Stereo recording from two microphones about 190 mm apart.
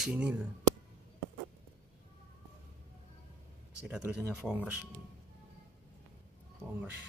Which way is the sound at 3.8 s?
5° right (ahead or behind).